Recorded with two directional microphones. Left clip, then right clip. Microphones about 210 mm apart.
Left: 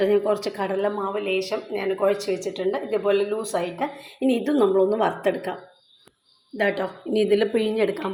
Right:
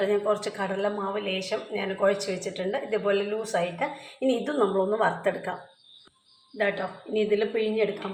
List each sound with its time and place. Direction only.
0.0 s speech: 30° left (ahead or behind)
6.6 s a woman's voice: 45° left (ahead or behind)